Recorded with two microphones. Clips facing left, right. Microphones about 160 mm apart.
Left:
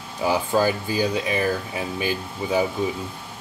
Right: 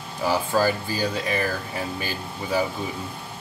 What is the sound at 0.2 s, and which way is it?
Speech, 15° left (ahead or behind).